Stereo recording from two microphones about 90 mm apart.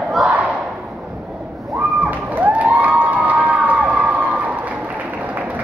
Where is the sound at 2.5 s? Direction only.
15° right (ahead or behind).